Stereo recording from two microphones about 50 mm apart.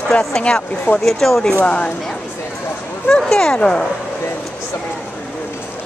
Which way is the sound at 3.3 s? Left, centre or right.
Centre.